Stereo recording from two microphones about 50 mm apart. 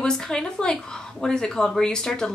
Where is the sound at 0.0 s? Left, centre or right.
Centre.